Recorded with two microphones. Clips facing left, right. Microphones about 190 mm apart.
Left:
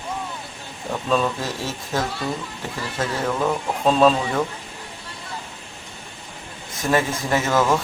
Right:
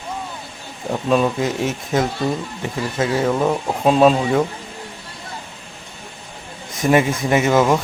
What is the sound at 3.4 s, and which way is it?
Speech, 15° right (ahead or behind).